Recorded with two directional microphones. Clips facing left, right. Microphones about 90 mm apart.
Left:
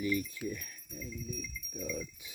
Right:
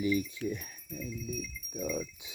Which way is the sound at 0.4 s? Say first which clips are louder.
Right 4 dB; 20° right (ahead or behind).